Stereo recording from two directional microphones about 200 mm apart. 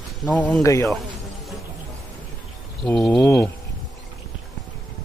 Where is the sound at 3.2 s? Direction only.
15° left (ahead or behind).